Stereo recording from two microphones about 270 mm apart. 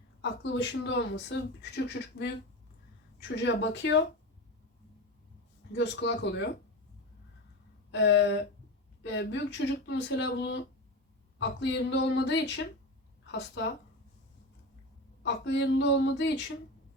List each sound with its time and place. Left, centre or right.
0.2 s speech: left
3.3 s speech: left
5.7 s speech: left
7.9 s a sound: left
9.0 s a woman's voice: left
15.2 s speech: left